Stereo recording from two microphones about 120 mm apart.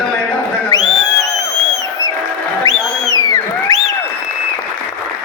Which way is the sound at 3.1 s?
30° left (ahead or behind).